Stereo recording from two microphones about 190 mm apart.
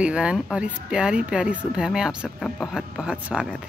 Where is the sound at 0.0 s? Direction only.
5° right (ahead or behind).